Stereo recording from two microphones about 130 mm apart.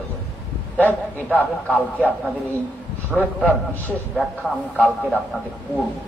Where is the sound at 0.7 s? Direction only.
15° left (ahead or behind).